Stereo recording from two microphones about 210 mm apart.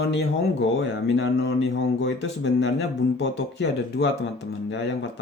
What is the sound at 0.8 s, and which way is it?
Speech, 60° left (ahead or behind).